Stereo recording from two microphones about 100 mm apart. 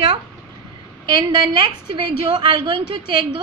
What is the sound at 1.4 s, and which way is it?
A woman's voice, 45° right (ahead or behind).